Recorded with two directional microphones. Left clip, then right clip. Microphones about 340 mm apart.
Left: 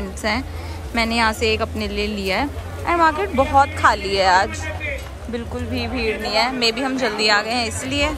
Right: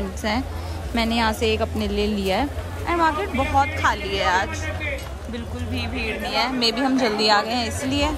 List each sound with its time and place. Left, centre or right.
0.2 s a woman's voice: centre
5.3 s speech: right
6.0 s speech: centre